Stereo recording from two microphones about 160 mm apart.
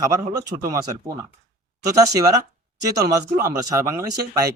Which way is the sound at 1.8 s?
20° right (ahead or behind).